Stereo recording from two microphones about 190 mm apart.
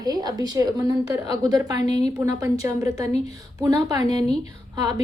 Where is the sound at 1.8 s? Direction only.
35° left (ahead or behind).